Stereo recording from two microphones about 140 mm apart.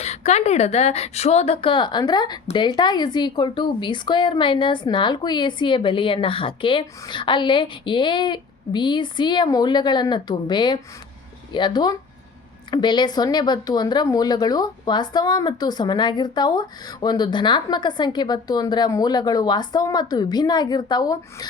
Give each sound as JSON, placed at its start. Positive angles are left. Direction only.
{"t": 0.0, "sound": "a woman's voice", "side_deg": 50}